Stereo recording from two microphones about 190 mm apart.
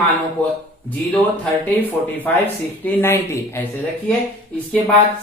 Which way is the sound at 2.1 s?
10° left (ahead or behind).